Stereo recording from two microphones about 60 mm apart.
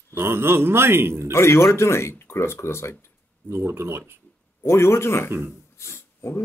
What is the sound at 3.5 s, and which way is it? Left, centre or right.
Speech, right.